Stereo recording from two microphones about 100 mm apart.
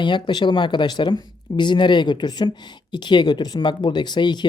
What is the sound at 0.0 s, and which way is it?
Speech, 50° left (ahead or behind).